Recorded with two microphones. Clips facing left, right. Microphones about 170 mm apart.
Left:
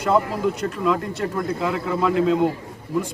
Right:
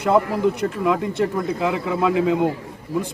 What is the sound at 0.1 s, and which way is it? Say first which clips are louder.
A man's voice: right 2 dB; 15° right (ahead or behind).